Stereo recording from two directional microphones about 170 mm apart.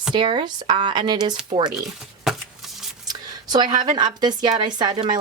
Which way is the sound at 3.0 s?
25° right (ahead or behind).